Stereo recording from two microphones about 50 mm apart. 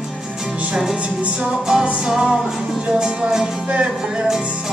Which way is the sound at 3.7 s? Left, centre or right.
Right.